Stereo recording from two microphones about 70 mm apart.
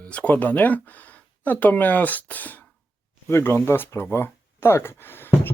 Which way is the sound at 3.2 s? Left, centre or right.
Left.